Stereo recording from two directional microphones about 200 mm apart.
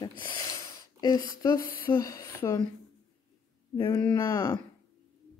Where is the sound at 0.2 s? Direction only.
20° left (ahead or behind).